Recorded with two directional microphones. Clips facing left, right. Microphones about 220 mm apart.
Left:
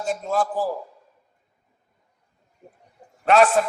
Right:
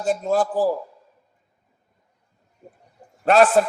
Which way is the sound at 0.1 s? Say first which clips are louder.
Right 4 dB; 35° right (ahead or behind).